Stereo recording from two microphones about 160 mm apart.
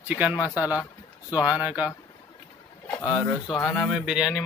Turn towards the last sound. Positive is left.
turn(degrees=-5)  # may be behind; listen again after turning